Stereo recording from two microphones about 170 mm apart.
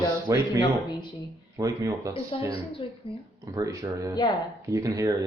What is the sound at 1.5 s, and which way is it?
Speech, 20° right (ahead or behind).